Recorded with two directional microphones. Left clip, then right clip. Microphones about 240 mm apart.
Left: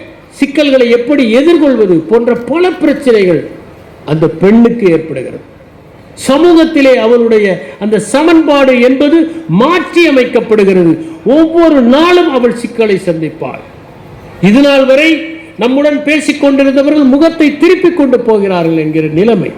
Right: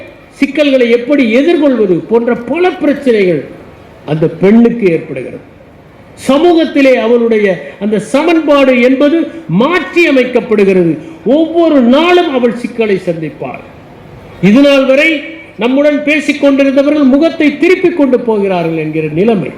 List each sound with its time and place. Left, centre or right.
0.3 s a man's voice: left
6.2 s a man's voice: left